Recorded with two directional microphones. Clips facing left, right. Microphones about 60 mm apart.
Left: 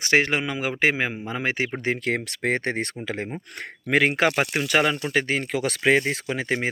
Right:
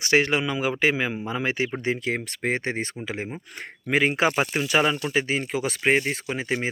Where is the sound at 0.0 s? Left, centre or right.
Left.